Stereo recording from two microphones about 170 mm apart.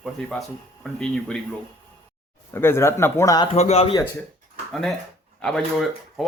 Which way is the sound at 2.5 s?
15° left (ahead or behind).